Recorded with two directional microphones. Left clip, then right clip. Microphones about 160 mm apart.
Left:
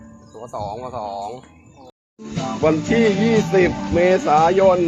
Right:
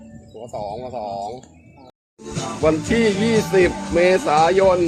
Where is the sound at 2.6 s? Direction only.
15° right (ahead or behind).